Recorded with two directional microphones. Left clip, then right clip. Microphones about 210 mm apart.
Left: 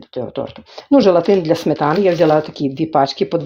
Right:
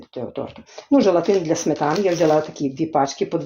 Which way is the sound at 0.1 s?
40° left (ahead or behind).